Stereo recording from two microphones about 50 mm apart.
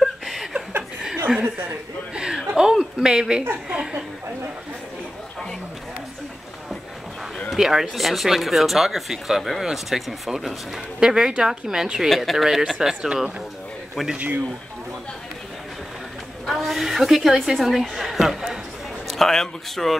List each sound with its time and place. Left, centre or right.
0.0 s chuckle: centre
1.3 s speech: centre
2.1 s a sound: centre
3.6 s speech: centre
7.4 s speech: centre
11.0 s speech: centre
14.1 s speech: right
16.4 s a woman's voice: centre
19.0 s speech: centre